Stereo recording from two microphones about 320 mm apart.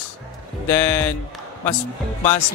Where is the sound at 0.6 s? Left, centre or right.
Centre.